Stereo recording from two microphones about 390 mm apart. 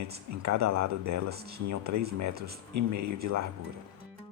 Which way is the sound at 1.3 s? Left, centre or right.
Right.